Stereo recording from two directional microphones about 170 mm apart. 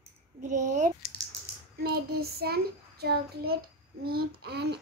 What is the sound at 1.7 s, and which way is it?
Child singing, 65° right (ahead or behind).